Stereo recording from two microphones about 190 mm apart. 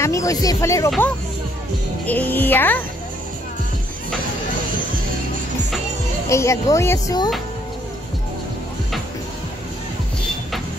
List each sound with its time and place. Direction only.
0.0 s speech: 15° left (ahead or behind)
0.8 s speech: centre (ahead or behind)
6.2 s speech: 15° left (ahead or behind)